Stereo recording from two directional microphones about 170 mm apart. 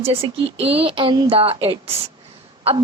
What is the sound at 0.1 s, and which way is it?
A woman's voice, 35° right (ahead or behind).